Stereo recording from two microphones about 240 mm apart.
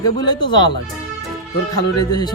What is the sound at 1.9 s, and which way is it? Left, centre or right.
Speech, centre.